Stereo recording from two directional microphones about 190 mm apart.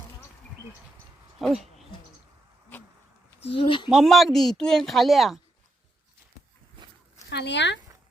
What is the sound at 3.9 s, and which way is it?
Speech, centre (ahead or behind).